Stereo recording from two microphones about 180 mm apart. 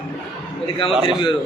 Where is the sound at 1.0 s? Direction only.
30° left (ahead or behind).